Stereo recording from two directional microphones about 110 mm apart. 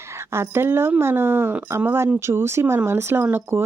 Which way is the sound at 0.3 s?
20° right (ahead or behind).